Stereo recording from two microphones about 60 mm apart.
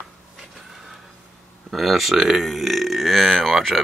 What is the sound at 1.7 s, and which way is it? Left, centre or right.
Speech, centre.